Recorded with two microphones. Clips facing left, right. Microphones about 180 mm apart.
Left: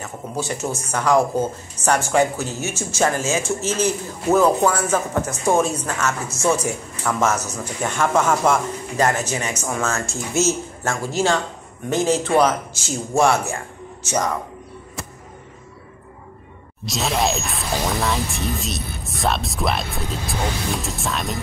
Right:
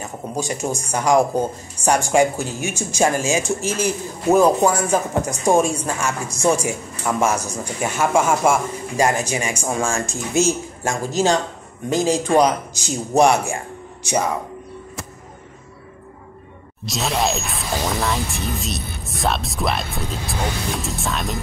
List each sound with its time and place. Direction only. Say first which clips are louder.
0.0 s speech: right 1 dB; 15° right (ahead or behind)
16.8 s speech: even; centre (ahead or behind)